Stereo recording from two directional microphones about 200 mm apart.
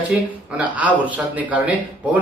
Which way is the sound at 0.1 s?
5° right (ahead or behind).